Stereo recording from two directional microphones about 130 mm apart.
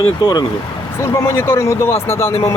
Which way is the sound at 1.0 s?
20° left (ahead or behind).